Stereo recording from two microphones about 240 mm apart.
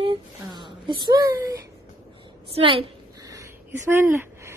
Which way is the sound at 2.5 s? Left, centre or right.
Right.